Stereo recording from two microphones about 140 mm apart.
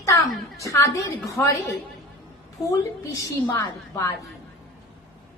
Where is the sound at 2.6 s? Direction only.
20° left (ahead or behind).